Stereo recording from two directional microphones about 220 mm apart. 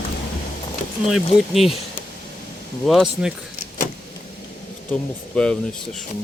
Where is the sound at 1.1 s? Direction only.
Centre (ahead or behind).